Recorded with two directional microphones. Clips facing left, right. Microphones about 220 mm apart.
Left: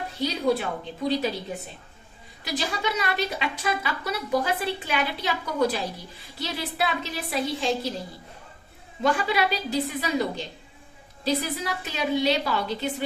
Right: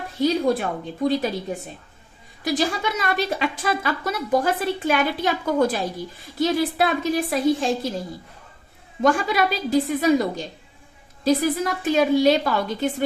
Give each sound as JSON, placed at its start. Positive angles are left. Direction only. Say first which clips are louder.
{"t": 0.2, "sound": "a woman's voice", "louder": "right 5 dB", "side_deg": -50}
{"t": 2.4, "sound": "a woman's voice", "louder": "right 6 dB", "side_deg": -50}
{"t": 9.0, "sound": "a woman's voice", "louder": "right 4 dB", "side_deg": -45}